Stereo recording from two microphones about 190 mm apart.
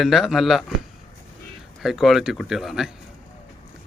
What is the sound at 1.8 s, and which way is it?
Speech, centre (ahead or behind).